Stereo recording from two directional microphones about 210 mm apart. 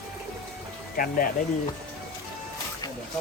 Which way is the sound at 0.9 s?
40° left (ahead or behind).